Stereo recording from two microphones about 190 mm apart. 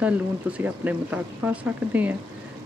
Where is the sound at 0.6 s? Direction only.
10° right (ahead or behind).